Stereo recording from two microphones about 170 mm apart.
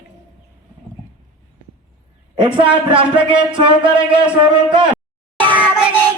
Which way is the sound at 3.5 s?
30° right (ahead or behind).